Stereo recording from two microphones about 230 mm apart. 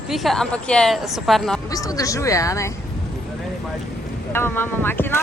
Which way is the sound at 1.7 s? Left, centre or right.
Centre.